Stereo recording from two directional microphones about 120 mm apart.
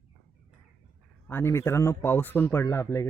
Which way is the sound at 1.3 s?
20° left (ahead or behind).